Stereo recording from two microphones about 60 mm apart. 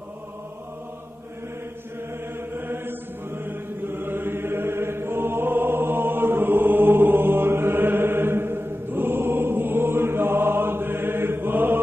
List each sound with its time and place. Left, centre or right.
2.5 s mantra: right